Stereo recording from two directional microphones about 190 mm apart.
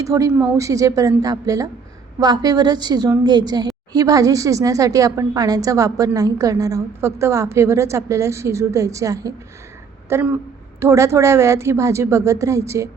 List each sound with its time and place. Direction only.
0.0 s a woman's voice: 15° right (ahead or behind)